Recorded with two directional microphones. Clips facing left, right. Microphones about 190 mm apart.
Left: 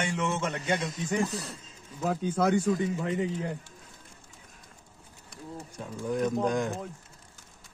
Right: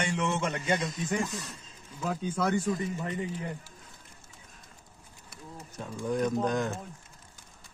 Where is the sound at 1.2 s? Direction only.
35° left (ahead or behind).